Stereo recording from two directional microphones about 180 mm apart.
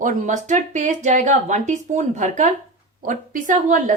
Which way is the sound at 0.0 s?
45° right (ahead or behind).